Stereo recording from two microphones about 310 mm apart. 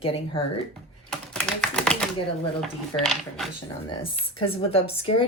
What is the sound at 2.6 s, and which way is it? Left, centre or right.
Speech, centre.